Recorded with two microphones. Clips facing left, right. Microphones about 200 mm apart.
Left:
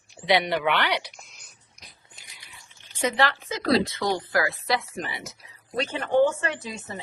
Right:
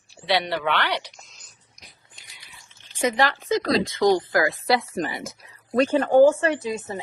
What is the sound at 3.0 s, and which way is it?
Speech, 15° right (ahead or behind).